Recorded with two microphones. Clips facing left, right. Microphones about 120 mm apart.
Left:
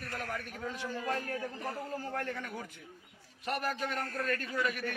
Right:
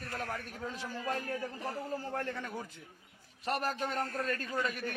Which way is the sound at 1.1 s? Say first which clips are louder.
Even; 30° right (ahead or behind).